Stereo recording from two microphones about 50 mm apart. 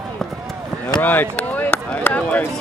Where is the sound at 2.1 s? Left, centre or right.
Left.